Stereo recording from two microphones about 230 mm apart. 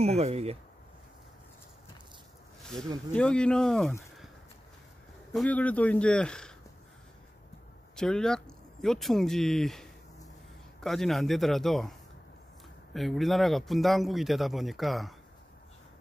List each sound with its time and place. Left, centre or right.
0.0 s speech: right
3.2 s speech: centre
5.3 s speech: centre
7.9 s speech: centre
12.9 s speech: centre